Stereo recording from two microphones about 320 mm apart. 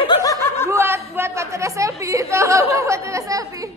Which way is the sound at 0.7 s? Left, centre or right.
Centre.